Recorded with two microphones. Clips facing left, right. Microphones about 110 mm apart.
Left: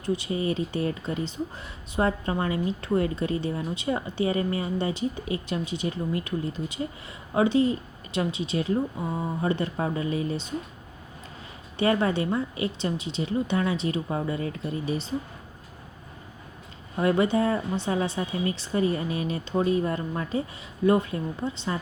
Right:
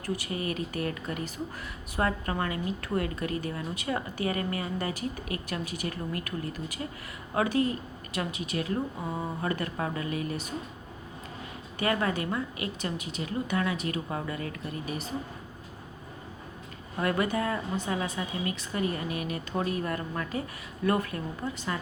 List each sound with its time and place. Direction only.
0.0 s a woman's voice: 20° left (ahead or behind)
11.8 s a woman's voice: 25° left (ahead or behind)
17.0 s a woman's voice: 25° left (ahead or behind)